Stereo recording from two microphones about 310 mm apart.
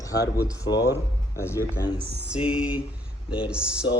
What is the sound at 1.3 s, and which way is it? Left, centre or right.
Speech, centre.